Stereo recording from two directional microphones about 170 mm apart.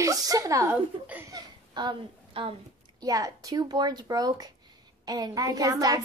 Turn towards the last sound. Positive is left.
turn(degrees=-20)  # may be behind; listen again after turning